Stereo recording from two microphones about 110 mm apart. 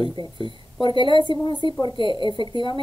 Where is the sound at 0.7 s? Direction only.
50° left (ahead or behind).